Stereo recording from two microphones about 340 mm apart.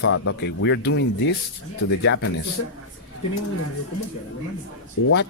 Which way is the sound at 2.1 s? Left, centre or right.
Left.